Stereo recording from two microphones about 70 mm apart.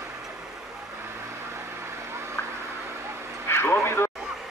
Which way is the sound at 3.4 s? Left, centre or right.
Left.